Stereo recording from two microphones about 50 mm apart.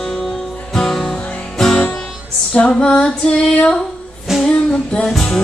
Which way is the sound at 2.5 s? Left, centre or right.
Centre.